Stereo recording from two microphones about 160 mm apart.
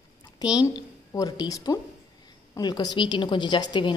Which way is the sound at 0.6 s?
25° left (ahead or behind).